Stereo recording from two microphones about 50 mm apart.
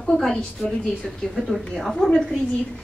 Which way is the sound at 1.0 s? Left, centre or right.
Centre.